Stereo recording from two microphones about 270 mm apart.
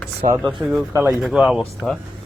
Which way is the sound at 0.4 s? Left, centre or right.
Centre.